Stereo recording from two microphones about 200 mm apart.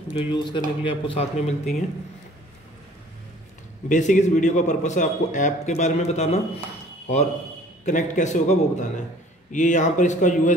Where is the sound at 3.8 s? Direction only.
40° left (ahead or behind).